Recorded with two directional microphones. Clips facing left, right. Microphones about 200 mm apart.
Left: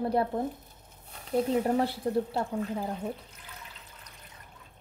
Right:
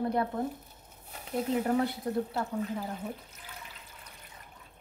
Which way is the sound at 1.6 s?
30° left (ahead or behind).